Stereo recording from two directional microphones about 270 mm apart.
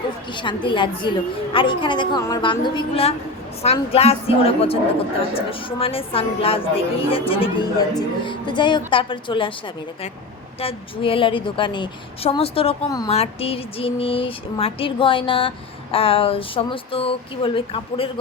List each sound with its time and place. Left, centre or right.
0.3 s a woman's voice: centre
10.6 s a woman's voice: left